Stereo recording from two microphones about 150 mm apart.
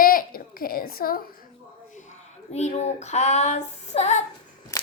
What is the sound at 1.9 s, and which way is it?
Speech, 55° left (ahead or behind).